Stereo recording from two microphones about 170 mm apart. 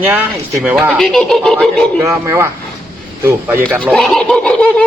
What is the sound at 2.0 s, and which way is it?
Speech, 15° right (ahead or behind).